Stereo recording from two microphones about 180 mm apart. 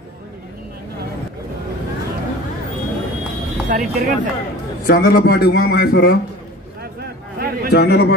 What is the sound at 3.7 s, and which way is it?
Speech, 45° right (ahead or behind).